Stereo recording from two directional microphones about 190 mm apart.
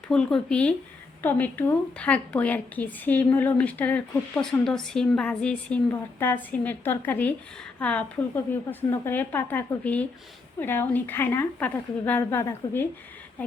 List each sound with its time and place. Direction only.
0.1 s a woman's voice: 5° left (ahead or behind)